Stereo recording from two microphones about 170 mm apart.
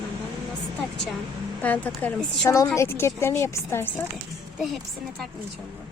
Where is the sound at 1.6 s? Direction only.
10° left (ahead or behind).